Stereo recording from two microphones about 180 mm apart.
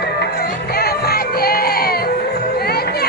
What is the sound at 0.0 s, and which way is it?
Music, 65° left (ahead or behind).